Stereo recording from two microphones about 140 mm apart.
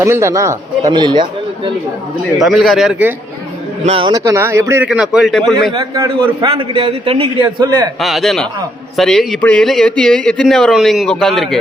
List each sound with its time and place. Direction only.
0.0 s speech: 20° right (ahead or behind); by 1.7 s 35° right (ahead or behind)
2.4 s speech: centre (ahead or behind)
3.8 s a man's voice: 40° right (ahead or behind)
4.1 s speech: 20° right (ahead or behind)
4.9 s speech: 5° right (ahead or behind)
5.7 s a man's voice: 30° right (ahead or behind)
8.0 s speech: centre (ahead or behind)